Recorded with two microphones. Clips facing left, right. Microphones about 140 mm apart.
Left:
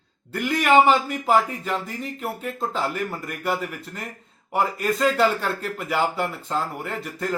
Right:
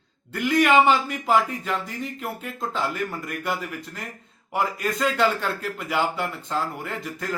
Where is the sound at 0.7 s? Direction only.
30° left (ahead or behind).